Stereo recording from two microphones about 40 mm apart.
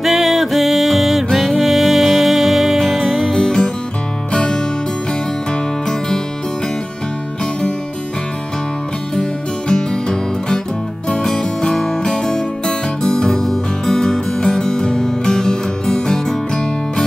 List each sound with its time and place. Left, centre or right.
0.0 s music: centre
3.3 s music: centre
9.1 s music: centre